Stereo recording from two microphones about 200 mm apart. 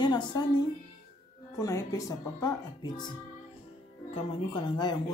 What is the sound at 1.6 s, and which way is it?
Speech, 15° left (ahead or behind).